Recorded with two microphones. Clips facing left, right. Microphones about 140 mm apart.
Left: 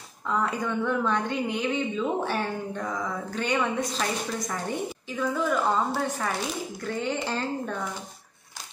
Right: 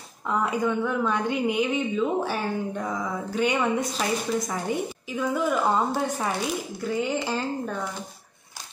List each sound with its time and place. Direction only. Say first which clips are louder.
0.3 s a woman's voice: right 3 dB; 10° right (ahead or behind)